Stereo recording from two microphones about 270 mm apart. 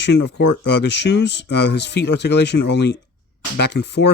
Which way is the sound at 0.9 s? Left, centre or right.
Left.